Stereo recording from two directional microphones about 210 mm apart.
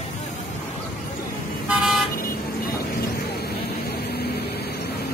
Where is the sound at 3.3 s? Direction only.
50° left (ahead or behind).